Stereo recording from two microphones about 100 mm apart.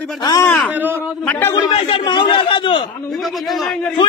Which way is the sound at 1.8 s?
55° left (ahead or behind).